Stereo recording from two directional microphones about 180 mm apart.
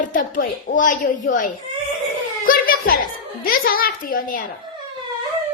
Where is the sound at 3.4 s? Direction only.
55° left (ahead or behind).